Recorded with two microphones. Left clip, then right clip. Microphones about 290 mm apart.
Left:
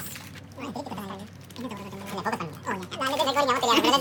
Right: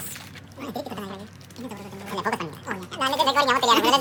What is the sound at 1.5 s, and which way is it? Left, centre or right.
Speech, centre.